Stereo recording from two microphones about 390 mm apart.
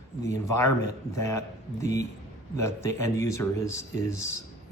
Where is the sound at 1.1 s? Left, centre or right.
Centre.